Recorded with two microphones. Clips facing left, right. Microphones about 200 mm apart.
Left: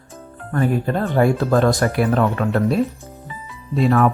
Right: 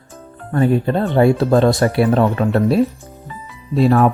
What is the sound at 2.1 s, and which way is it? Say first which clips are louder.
Speech: right 3 dB; 30° right (ahead or behind).